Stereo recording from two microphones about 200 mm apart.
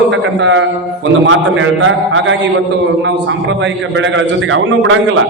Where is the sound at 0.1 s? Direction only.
70° right (ahead or behind).